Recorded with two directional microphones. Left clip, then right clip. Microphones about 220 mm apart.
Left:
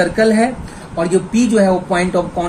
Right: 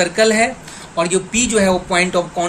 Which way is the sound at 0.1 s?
40° right (ahead or behind).